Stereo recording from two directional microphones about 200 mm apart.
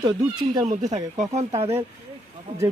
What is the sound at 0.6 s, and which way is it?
Speech, 35° right (ahead or behind).